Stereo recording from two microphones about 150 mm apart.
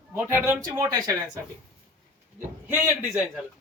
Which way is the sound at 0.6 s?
20° right (ahead or behind).